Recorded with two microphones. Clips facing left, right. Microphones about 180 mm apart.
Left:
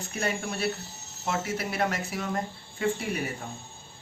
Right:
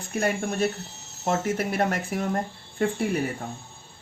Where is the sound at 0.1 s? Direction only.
50° right (ahead or behind).